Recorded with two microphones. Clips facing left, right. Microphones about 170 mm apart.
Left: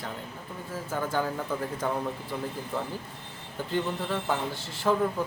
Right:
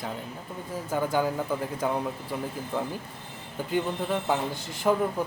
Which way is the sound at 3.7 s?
15° right (ahead or behind).